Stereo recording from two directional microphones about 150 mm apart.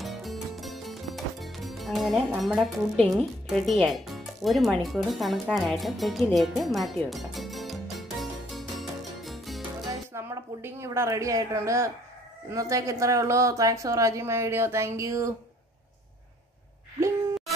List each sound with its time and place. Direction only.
0.0 s music: centre (ahead or behind)
10.1 s speech: 15° right (ahead or behind)